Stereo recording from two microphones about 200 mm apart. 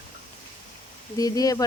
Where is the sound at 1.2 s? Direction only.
20° left (ahead or behind).